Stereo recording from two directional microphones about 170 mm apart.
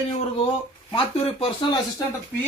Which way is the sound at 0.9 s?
35° left (ahead or behind).